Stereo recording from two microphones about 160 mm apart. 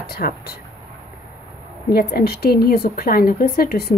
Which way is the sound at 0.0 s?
70° left (ahead or behind).